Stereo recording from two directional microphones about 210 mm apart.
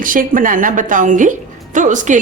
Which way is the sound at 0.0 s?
40° right (ahead or behind).